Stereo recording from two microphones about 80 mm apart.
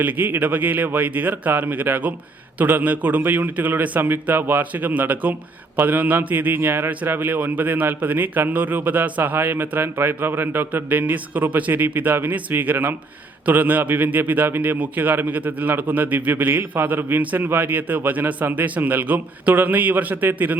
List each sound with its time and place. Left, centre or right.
0.0 s a man's voice: right